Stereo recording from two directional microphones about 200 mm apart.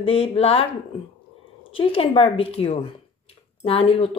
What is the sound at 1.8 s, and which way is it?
Speech, 25° left (ahead or behind).